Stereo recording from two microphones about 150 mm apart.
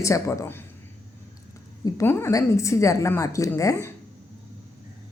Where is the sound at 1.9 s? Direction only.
20° left (ahead or behind).